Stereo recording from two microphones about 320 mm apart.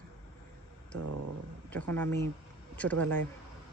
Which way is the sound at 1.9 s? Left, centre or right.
Centre.